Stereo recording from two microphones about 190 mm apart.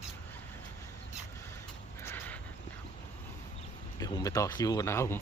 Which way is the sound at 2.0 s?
10° left (ahead or behind).